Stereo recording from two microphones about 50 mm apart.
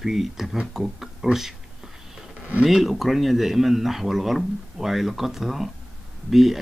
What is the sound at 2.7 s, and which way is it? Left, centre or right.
Speech, centre.